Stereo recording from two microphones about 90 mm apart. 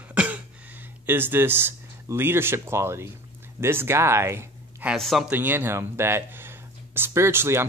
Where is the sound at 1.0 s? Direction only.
25° right (ahead or behind).